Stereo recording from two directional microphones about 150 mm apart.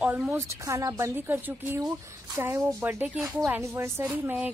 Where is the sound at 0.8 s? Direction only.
20° right (ahead or behind).